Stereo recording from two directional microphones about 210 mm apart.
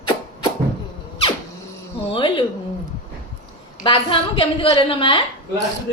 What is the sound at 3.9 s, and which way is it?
A woman's voice, 25° left (ahead or behind).